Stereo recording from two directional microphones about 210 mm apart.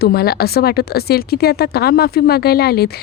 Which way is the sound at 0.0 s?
45° left (ahead or behind).